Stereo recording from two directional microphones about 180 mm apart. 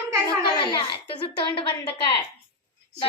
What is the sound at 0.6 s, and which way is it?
A child's voice, 25° left (ahead or behind).